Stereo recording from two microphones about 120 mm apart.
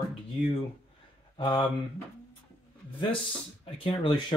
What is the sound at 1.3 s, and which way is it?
Speech, 35° left (ahead or behind).